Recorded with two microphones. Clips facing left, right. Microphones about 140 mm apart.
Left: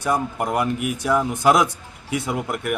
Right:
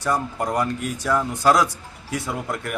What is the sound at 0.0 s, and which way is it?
A man's voice, 15° left (ahead or behind).